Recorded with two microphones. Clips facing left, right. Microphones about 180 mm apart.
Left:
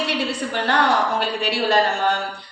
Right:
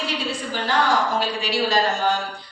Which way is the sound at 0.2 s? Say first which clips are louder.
Left 3 dB; 65° left (ahead or behind).